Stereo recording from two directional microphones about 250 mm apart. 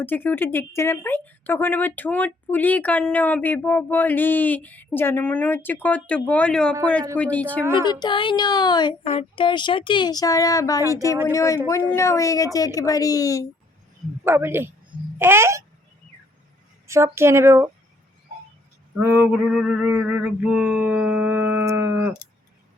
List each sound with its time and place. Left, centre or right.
0.0 s speech: centre
7.2 s male singing: centre
7.6 s speech: centre
7.9 s speech: centre
14.3 s speech: centre
16.8 s speech: centre
18.9 s male singing: centre